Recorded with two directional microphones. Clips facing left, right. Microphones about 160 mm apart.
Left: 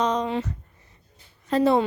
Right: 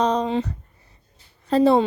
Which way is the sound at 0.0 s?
35° right (ahead or behind).